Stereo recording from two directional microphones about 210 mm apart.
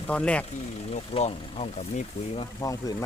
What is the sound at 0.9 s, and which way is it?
Speech, 30° left (ahead or behind).